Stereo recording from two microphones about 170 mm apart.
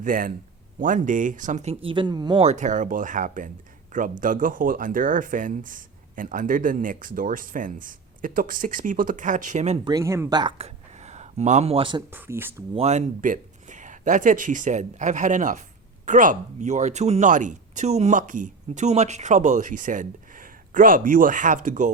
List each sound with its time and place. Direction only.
0.0 s speech: 55° right (ahead or behind); by 2.4 s 25° right (ahead or behind)
2.4 s speech: 45° right (ahead or behind)
9.8 s speech: 20° right (ahead or behind)
10.6 s a sound: 40° right (ahead or behind)
12.1 s speech: 10° right (ahead or behind)
12.7 s speech: 40° right (ahead or behind)